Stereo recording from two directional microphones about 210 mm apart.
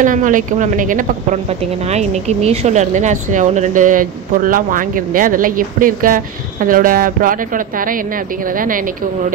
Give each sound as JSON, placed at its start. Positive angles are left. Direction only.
{"t": 0.0, "sound": "speech", "side_deg": -40}